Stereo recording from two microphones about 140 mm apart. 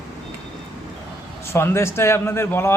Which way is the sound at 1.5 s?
20° left (ahead or behind).